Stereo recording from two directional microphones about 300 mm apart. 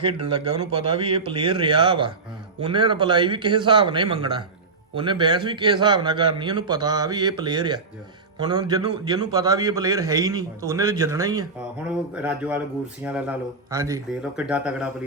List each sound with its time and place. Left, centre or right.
0.0 s a man's voice: centre